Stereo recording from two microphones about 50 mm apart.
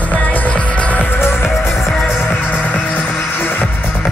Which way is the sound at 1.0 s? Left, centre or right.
Left.